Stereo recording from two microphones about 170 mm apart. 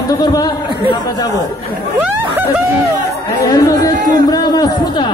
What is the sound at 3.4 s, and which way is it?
Chatter, 20° left (ahead or behind).